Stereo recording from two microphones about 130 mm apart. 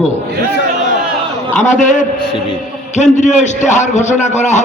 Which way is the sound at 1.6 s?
70° left (ahead or behind).